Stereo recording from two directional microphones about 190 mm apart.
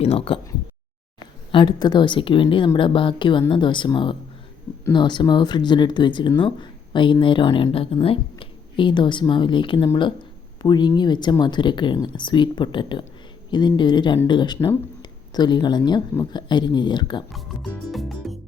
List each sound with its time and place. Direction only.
0.0 s speech: 30° left (ahead or behind)
1.5 s speech: 25° left (ahead or behind)
17.3 s music: centre (ahead or behind)